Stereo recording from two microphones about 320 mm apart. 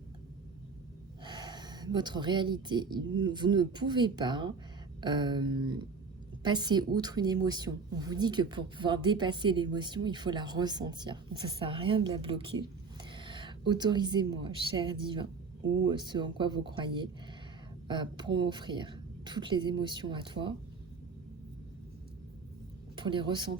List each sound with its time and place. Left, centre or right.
1.2 s a woman's voice: centre
15.6 s speech: right
15.9 s a woman's voice: centre
23.0 s a woman's voice: centre